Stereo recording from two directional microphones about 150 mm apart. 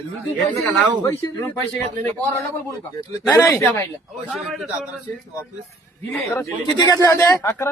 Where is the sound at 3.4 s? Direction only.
15° left (ahead or behind).